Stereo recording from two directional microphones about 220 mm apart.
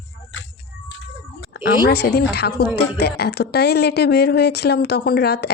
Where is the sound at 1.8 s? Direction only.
50° left (ahead or behind).